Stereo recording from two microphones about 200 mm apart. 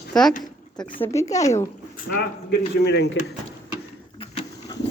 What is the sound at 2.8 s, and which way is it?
Speech, 55° left (ahead or behind).